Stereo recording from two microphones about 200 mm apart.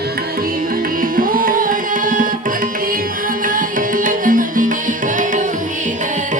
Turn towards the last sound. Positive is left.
turn(degrees=-40)  # may be behind; listen again after turning